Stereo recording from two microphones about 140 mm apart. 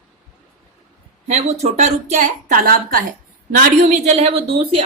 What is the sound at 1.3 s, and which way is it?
Speech, 55° right (ahead or behind).